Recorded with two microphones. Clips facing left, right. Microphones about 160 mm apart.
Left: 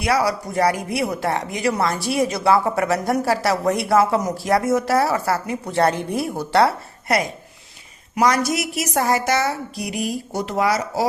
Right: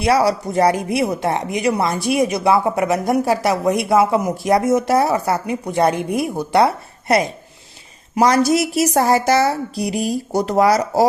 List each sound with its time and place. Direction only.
0.0 s a woman's voice: 25° right (ahead or behind)